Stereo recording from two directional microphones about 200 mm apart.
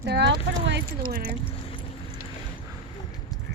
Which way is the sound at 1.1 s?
45° right (ahead or behind).